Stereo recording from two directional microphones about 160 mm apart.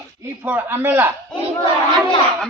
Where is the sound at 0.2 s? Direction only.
10° right (ahead or behind).